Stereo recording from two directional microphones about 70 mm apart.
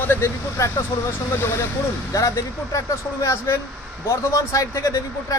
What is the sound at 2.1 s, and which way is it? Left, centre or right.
A man's voice, left.